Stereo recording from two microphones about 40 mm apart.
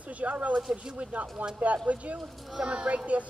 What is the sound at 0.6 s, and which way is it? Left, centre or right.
Speech, centre.